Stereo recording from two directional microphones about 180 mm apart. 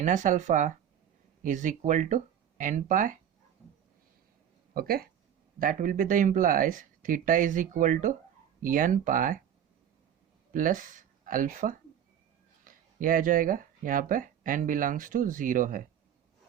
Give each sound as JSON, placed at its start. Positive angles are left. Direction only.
{"t": 0.0, "sound": "speech", "side_deg": -45}
{"t": 4.7, "sound": "speech", "side_deg": -55}
{"t": 10.5, "sound": "speech", "side_deg": -50}